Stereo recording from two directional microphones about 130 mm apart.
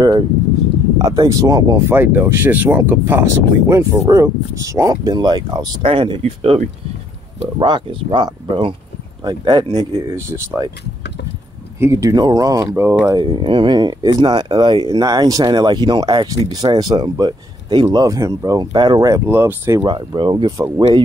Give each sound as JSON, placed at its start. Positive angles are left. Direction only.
{"t": 0.9, "sound": "speech", "side_deg": -30}
{"t": 2.0, "sound": "speech", "side_deg": -15}
{"t": 10.0, "sound": "speech", "side_deg": -20}
{"t": 11.8, "sound": "speech", "side_deg": -25}
{"t": 13.1, "sound": "speech", "side_deg": -35}
{"t": 19.0, "sound": "speech", "side_deg": -20}
{"t": 19.8, "sound": "speech", "side_deg": -35}
{"t": 20.5, "sound": "speech", "side_deg": -20}